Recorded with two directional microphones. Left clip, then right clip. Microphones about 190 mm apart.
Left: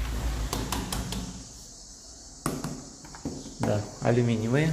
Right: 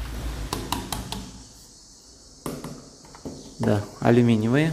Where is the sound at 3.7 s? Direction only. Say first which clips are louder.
Right 6 dB; 35° right (ahead or behind).